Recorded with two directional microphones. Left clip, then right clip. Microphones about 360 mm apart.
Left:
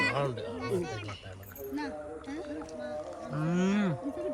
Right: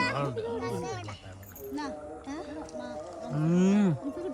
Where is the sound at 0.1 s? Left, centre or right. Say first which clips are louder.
Even; left.